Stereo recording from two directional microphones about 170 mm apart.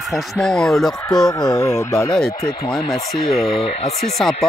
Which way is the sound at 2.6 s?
Centre (ahead or behind).